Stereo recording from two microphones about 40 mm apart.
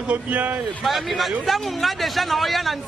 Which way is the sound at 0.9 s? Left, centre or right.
Centre.